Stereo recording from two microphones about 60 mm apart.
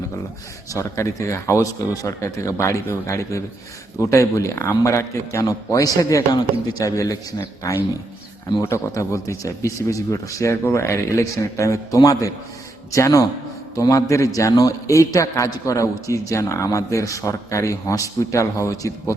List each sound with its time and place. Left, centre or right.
0.7 s a man's voice: left
6.0 s a man's voice: left
12.9 s a man's voice: left
13.7 s a man's voice: left